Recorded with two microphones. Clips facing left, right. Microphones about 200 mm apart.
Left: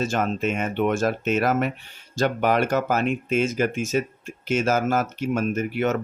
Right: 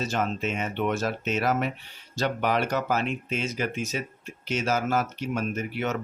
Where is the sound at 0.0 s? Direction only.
50° left (ahead or behind).